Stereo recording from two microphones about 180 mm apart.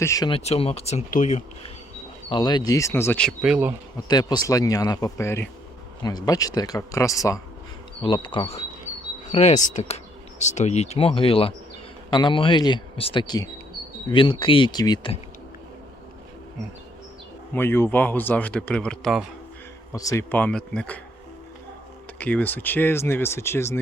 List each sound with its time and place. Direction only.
0.0 s speech: 15° left (ahead or behind)
0.3 s speech: 35° left (ahead or behind)
2.3 s speech: 25° left (ahead or behind); by 3.8 s 10° right (ahead or behind)
3.9 s speech: 20° left (ahead or behind)
17.5 s speech: 10° left (ahead or behind)
19.9 s speech: 20° left (ahead or behind)
22.2 s speech: 10° left (ahead or behind)